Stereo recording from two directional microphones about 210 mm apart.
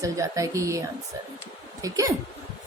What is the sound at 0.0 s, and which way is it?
Speech, 15° right (ahead or behind).